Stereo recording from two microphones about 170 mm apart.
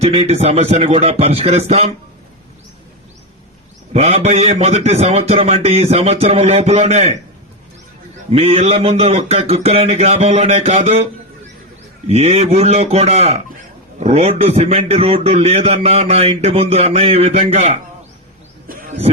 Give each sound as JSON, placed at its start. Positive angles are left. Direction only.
{"t": 0.0, "sound": "a man's voice", "side_deg": -35}
{"t": 3.9, "sound": "a man's voice", "side_deg": -35}
{"t": 8.3, "sound": "a man's voice", "side_deg": -40}
{"t": 18.7, "sound": "a sound", "side_deg": -55}